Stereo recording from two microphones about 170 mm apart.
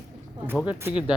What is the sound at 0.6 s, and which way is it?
Speech, 10° right (ahead or behind).